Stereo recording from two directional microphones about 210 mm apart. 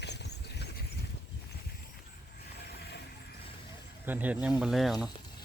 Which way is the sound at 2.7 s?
50° left (ahead or behind).